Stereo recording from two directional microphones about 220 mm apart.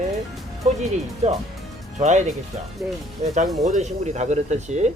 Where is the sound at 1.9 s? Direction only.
35° right (ahead or behind).